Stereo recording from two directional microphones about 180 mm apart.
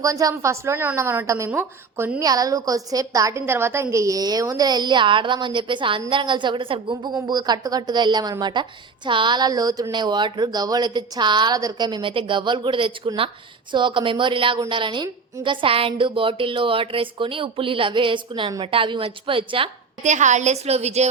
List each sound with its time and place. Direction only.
0.0 s a woman's voice: 20° right (ahead or behind)
20.1 s a woman's voice: 40° right (ahead or behind)